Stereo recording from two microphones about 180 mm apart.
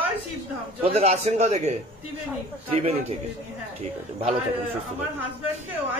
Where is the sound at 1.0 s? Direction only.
35° right (ahead or behind).